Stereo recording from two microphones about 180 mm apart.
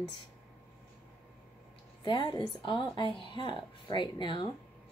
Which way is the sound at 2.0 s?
25° left (ahead or behind).